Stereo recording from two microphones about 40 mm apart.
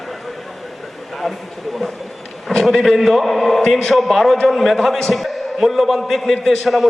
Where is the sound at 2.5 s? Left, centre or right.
Centre.